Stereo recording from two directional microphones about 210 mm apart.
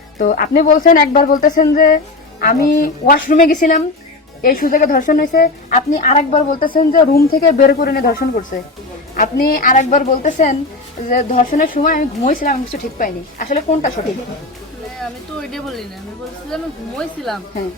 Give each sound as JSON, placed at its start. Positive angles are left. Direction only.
{"t": 0.2, "sound": "a woman's voice", "side_deg": 40}
{"t": 14.0, "sound": "a woman's voice", "side_deg": 30}
{"t": 15.4, "sound": "speech", "side_deg": 0}